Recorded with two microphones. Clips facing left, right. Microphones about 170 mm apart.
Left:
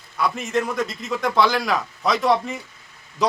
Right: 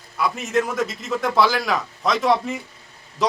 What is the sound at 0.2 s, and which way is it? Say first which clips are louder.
A man's voice: right 1 dB; 5° right (ahead or behind).